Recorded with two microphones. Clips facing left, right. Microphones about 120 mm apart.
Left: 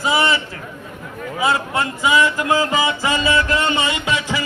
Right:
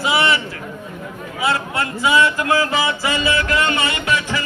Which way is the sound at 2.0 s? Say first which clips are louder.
Right 1 dB; 15° left (ahead or behind).